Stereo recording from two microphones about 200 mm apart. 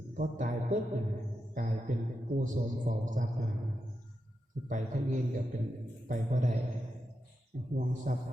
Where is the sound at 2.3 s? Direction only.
40° right (ahead or behind).